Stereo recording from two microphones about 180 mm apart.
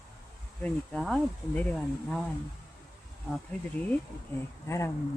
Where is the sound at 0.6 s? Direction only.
Centre (ahead or behind).